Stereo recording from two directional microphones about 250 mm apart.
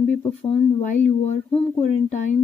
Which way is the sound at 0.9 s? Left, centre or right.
Left.